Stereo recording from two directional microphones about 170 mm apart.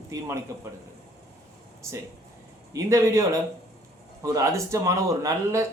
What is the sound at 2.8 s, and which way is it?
A man's voice, 15° right (ahead or behind).